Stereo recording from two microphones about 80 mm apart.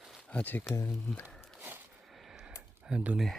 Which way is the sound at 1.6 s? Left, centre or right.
Right.